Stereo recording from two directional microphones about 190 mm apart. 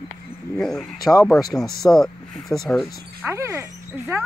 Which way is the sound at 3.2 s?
15° right (ahead or behind).